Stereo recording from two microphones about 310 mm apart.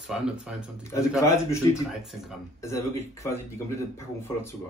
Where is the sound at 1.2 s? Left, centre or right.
Centre.